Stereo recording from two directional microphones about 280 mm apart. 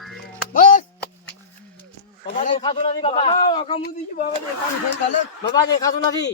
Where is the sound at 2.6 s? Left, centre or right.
Centre.